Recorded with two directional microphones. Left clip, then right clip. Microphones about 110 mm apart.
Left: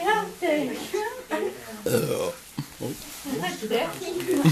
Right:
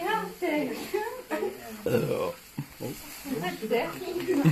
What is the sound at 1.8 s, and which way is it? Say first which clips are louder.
Burping: left 2 dB; 5° right (ahead or behind).